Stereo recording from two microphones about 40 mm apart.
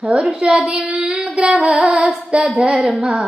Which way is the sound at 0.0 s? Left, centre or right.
Right.